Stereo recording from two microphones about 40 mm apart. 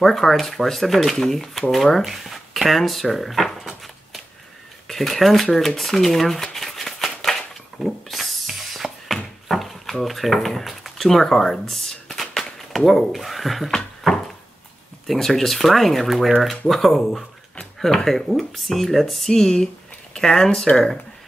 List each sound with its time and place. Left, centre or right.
0.0 s speech: centre
2.2 s drawer open or close: centre
4.8 s speech: centre
7.8 s a sound: centre
10.0 s speech: centre
14.0 s a sound: centre
15.1 s speech: centre